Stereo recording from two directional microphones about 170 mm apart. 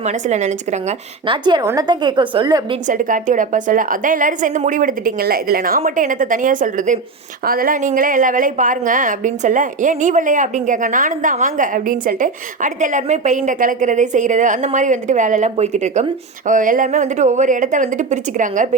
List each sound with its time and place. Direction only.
0.0 s a woman's voice: 45° right (ahead or behind)
1.3 s a woman's voice: 25° right (ahead or behind)
2.8 s a woman's voice: 50° right (ahead or behind)